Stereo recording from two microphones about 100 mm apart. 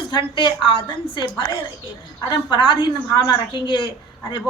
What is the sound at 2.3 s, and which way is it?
A woman's voice, 55° left (ahead or behind).